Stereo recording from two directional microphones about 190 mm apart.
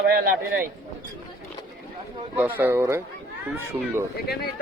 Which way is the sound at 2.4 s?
10° right (ahead or behind).